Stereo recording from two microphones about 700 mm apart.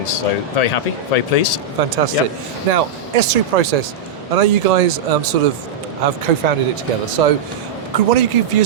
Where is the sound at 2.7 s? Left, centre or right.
Right.